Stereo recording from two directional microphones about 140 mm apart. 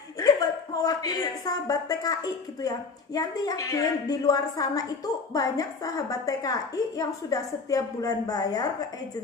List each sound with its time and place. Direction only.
0.2 s a woman's voice: 25° left (ahead or behind)